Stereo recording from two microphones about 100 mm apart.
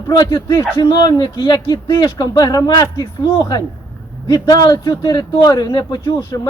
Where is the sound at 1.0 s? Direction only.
45° left (ahead or behind).